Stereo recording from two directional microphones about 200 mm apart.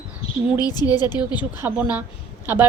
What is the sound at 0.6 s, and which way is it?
Speech, 20° left (ahead or behind).